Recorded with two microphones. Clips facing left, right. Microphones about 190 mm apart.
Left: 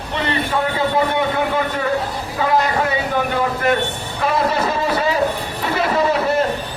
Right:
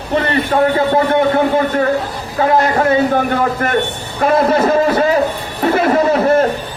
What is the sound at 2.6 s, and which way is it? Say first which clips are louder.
A man's voice: right 6 dB; 50° right (ahead or behind).